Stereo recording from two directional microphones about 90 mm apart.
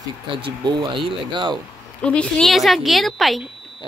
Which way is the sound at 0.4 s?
60° right (ahead or behind).